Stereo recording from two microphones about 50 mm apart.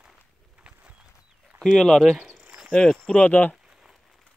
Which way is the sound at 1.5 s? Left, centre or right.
Centre.